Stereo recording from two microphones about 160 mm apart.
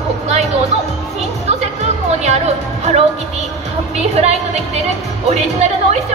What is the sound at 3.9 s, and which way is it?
Speech, 40° right (ahead or behind).